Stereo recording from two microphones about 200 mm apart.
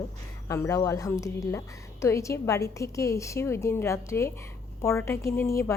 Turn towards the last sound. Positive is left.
turn(degrees=15)  # may be behind; listen again after turning